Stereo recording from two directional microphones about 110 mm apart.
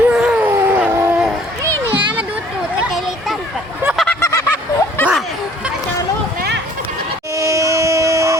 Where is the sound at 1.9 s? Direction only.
50° right (ahead or behind).